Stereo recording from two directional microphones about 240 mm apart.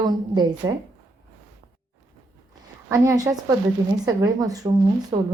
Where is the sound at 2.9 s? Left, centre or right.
Centre.